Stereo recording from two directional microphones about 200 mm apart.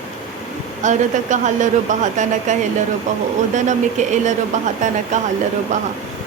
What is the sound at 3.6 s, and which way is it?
Speech, 35° right (ahead or behind).